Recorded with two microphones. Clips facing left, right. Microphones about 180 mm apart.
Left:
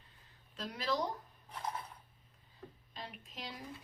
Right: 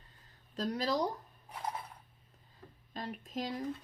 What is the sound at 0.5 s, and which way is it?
Speech, 40° right (ahead or behind).